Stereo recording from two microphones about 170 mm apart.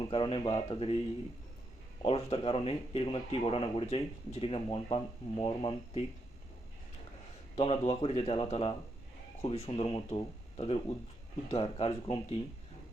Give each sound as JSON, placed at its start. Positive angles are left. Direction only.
{"t": 0.0, "sound": "speech", "side_deg": 30}
{"t": 2.0, "sound": "speech", "side_deg": 35}
{"t": 7.5, "sound": "speech", "side_deg": 35}